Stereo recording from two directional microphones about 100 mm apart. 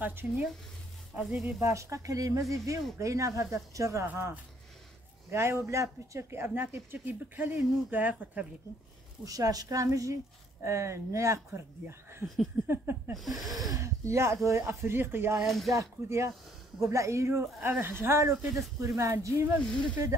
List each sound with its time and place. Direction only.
0.0 s speech: 20° right (ahead or behind)
1.1 s speech: 5° right (ahead or behind)
1.6 s speech: 30° right (ahead or behind)
4.1 s speech: 20° right (ahead or behind)
9.2 s speech: 35° right (ahead or behind)
13.1 s speech: centre (ahead or behind)
13.7 s speech: 30° right (ahead or behind)
15.4 s speech: centre (ahead or behind)
15.7 s speech: 30° right (ahead or behind)